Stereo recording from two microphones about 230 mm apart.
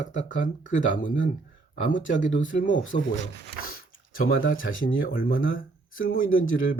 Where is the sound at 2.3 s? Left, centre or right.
Left.